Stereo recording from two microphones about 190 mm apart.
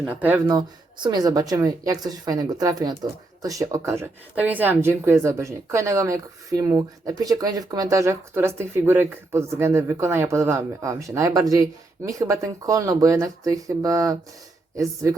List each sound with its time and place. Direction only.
0.2 s speech: 10° right (ahead or behind)
0.4 s speech: 20° right (ahead or behind)